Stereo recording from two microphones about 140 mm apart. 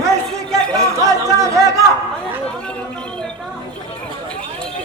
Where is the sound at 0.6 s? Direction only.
5° left (ahead or behind).